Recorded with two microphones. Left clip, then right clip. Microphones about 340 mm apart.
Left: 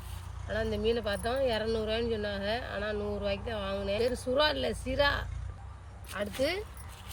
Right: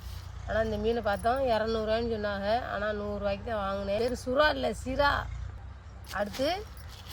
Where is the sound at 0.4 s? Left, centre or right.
Centre.